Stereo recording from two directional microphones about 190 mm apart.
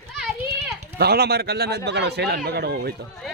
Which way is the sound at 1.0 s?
55° right (ahead or behind).